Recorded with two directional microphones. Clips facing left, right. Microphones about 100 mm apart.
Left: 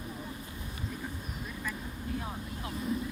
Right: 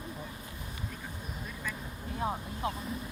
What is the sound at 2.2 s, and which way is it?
Speech, 35° right (ahead or behind).